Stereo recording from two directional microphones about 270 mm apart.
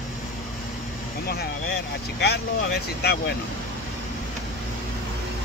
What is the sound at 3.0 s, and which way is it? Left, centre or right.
Speech, left.